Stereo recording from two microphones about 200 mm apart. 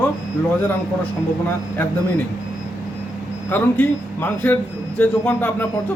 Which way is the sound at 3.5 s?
10° left (ahead or behind).